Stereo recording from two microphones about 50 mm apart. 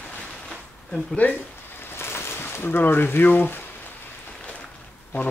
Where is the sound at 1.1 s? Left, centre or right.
Left.